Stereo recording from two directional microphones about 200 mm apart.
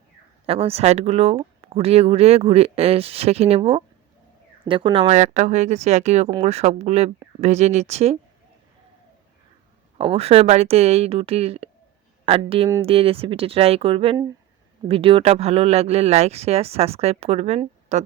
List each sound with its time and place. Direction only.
0.4 s speech: 30° right (ahead or behind)
10.0 s speech: 30° right (ahead or behind)